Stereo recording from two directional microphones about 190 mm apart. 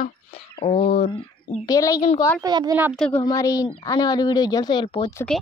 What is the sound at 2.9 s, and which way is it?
Speech, 5° left (ahead or behind).